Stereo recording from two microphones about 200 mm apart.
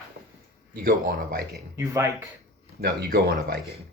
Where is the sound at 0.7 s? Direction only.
50° right (ahead or behind).